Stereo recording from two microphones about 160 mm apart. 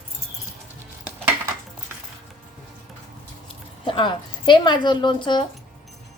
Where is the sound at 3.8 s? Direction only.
35° left (ahead or behind).